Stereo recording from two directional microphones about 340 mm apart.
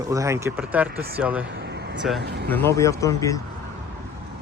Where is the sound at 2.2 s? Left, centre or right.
Right.